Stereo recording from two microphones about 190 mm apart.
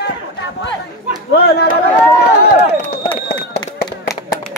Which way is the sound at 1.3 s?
55° left (ahead or behind).